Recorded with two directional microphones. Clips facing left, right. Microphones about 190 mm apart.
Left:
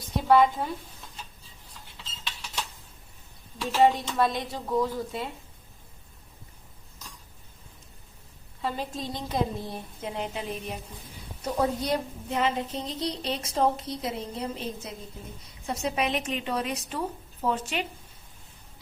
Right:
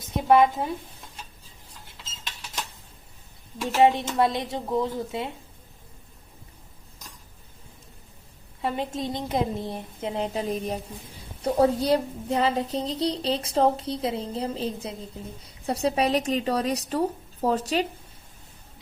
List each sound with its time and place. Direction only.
0.0 s speech: 20° right (ahead or behind)
3.6 s a woman's voice: 15° right (ahead or behind)
8.6 s a woman's voice: 25° right (ahead or behind); by 17.8 s 40° right (ahead or behind)